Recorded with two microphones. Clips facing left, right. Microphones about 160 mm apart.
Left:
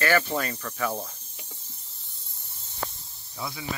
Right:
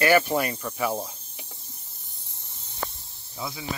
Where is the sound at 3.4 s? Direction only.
20° right (ahead or behind).